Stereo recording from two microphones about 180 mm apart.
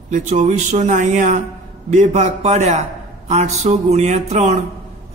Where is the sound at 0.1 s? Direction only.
40° right (ahead or behind).